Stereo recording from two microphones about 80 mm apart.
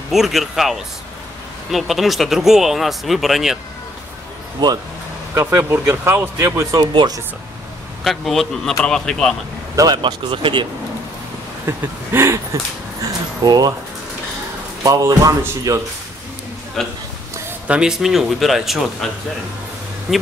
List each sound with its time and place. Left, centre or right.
0.1 s speech: centre
4.6 s speech: right
5.3 s speech: right
6.8 s speech: right
8.0 s speech: centre
9.8 s speech: right
11.6 s speech: right
13.4 s speech: right
14.8 s speech: right
16.8 s speech: centre
17.6 s speech: centre
20.1 s speech: centre